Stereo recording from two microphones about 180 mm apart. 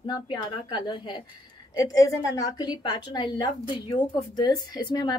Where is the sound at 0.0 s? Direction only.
25° left (ahead or behind).